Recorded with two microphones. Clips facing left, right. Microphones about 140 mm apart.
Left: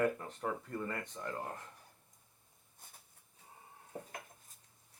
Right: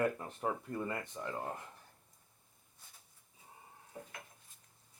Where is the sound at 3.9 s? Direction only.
45° left (ahead or behind).